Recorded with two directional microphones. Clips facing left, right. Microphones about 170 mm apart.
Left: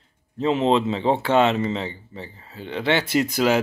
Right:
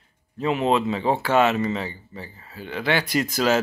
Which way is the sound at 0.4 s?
25° left (ahead or behind).